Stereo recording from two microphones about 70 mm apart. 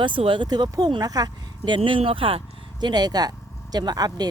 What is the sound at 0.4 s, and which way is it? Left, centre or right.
Speech, right.